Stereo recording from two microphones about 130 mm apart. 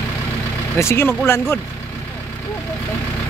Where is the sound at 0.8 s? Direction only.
20° left (ahead or behind).